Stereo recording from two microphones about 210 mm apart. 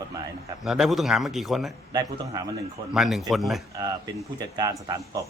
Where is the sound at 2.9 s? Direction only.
Centre (ahead or behind).